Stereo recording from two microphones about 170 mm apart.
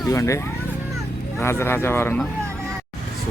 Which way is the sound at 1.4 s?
15° left (ahead or behind).